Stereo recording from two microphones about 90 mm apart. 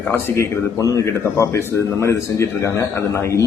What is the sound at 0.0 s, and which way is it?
A man's voice, 25° left (ahead or behind).